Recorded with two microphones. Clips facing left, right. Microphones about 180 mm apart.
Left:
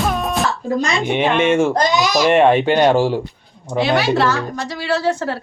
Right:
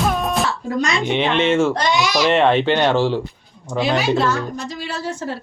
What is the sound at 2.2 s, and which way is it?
Speech, 15° left (ahead or behind).